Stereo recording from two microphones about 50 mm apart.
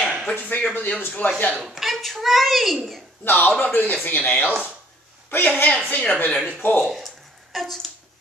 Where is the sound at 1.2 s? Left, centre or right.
Left.